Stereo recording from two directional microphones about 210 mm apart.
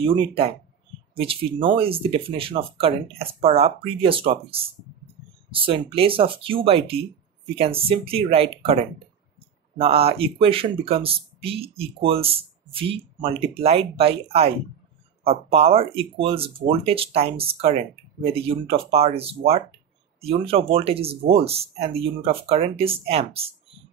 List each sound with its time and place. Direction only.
0.0 s speech: 25° right (ahead or behind)
9.8 s speech: 25° right (ahead or behind)